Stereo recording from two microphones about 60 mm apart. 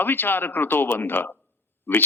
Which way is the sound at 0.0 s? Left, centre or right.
Left.